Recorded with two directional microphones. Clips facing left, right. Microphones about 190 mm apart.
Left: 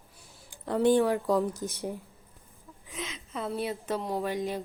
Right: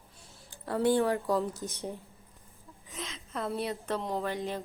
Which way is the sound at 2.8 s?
5° left (ahead or behind).